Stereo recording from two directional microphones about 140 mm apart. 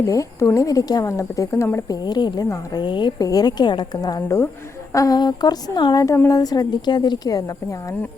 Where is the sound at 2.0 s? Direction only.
30° left (ahead or behind).